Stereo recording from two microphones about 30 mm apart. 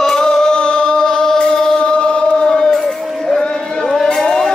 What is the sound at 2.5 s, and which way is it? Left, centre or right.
Music, left.